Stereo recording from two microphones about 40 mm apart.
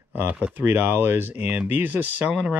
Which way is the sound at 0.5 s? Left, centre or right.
Right.